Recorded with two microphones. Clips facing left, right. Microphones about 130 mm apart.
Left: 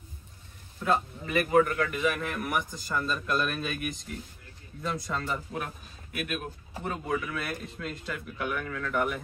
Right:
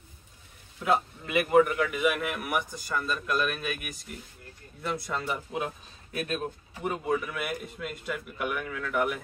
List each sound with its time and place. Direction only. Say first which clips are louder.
0.7 s a man's voice: right 1 dB; 10° right (ahead or behind)
6.1 s speech: right 3 dB; 30° right (ahead or behind)
6.8 s a man's voice: right 2 dB; 15° right (ahead or behind)